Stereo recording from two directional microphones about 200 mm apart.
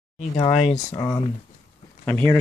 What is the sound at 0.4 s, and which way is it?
Speech, 30° left (ahead or behind).